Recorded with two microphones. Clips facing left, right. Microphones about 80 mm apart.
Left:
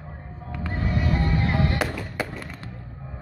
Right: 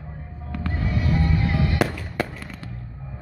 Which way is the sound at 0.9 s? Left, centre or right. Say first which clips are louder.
Right 1 dB; left.